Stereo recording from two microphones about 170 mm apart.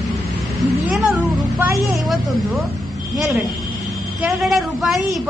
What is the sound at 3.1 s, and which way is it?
A woman's voice, centre (ahead or behind).